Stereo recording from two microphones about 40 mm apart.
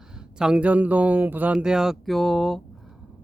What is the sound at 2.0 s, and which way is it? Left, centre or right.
Speech, centre.